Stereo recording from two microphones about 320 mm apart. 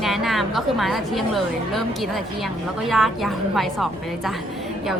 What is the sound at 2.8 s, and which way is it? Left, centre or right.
A woman's voice, centre.